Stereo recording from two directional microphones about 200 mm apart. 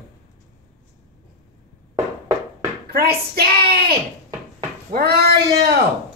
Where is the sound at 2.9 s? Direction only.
50° right (ahead or behind).